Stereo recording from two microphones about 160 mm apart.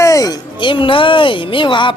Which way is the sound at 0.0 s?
20° left (ahead or behind).